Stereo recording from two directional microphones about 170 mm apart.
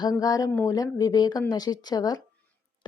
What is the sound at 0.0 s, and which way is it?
Mantra, 20° left (ahead or behind).